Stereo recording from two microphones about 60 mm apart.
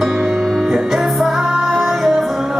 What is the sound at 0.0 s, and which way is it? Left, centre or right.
Music, centre.